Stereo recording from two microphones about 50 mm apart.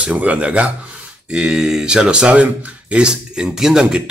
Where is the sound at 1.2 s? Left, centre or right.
Centre.